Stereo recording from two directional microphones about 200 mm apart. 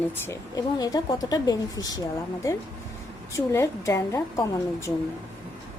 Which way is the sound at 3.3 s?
15° left (ahead or behind).